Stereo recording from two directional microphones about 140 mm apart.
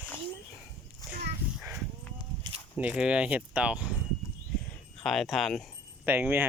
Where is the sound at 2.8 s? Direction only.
10° right (ahead or behind).